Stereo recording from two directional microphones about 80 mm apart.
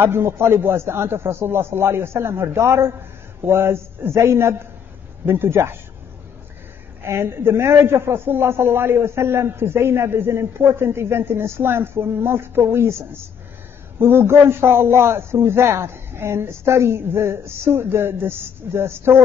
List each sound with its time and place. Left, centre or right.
0.0 s a man's voice: right
7.1 s a man's voice: right